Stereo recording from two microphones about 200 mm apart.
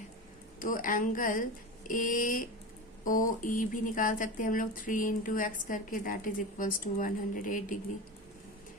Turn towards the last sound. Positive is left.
turn(degrees=40)  # may be behind; listen again after turning